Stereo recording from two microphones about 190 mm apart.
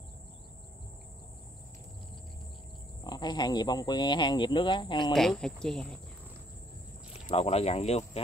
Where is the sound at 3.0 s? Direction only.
20° left (ahead or behind).